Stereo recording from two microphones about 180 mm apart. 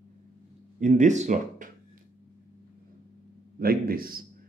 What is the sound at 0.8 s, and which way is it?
Speech, 40° right (ahead or behind).